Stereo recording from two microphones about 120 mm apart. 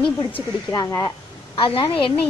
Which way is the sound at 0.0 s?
45° left (ahead or behind).